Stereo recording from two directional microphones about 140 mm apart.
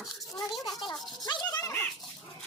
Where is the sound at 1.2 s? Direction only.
30° left (ahead or behind).